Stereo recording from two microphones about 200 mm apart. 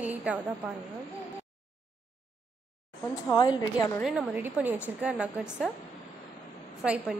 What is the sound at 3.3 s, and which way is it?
Speech, 20° left (ahead or behind).